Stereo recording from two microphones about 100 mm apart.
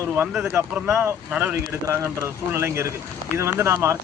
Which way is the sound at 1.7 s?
25° right (ahead or behind).